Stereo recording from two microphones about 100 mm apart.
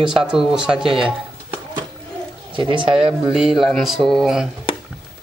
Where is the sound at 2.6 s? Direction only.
55° right (ahead or behind).